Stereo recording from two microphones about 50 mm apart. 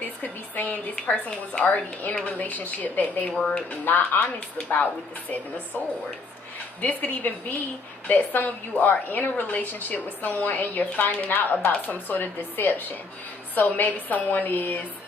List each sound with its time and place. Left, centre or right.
0.2 s a woman's voice: left
3.3 s speech: centre
3.7 s a woman's voice: left
6.8 s a woman's voice: left